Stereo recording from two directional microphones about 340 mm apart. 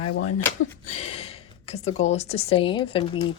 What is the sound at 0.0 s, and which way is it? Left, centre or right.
Speech, left.